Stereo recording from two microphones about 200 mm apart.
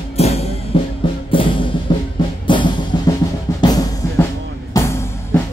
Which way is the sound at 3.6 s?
15° left (ahead or behind).